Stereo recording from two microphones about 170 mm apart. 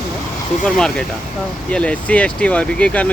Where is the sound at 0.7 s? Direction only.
5° left (ahead or behind).